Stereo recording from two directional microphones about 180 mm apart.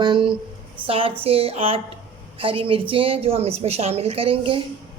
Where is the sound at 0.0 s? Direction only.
25° right (ahead or behind).